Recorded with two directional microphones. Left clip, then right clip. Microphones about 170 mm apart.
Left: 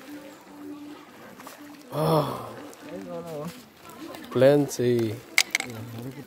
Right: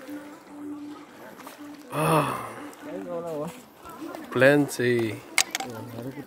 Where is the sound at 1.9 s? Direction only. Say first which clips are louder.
Right 1 dB; 5° left (ahead or behind).